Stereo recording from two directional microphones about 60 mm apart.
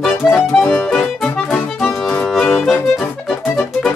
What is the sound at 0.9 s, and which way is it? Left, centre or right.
Music, centre.